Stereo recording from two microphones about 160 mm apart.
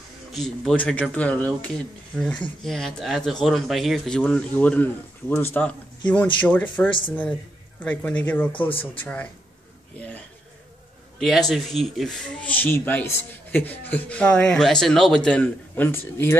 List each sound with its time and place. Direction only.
0.3 s speech: centre (ahead or behind)
8.5 s speech: 35° left (ahead or behind)
9.0 s speech: 10° left (ahead or behind)